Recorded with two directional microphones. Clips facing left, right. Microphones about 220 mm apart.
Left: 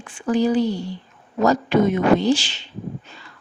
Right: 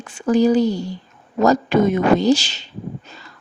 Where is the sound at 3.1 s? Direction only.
40° right (ahead or behind).